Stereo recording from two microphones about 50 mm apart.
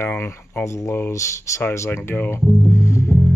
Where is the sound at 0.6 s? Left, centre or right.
Left.